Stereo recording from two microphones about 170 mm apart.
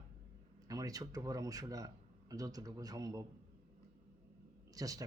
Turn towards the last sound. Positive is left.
turn(degrees=-20)  # may be behind; listen again after turning